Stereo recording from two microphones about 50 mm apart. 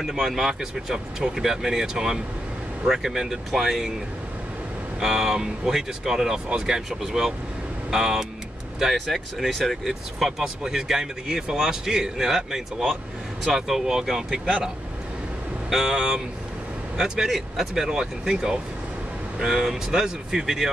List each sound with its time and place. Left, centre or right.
0.0 s a man's voice: centre
5.0 s a man's voice: centre
8.9 s a man's voice: centre
15.7 s a man's voice: centre